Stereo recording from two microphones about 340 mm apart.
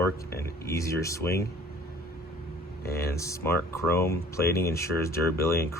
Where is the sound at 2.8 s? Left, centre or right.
Left.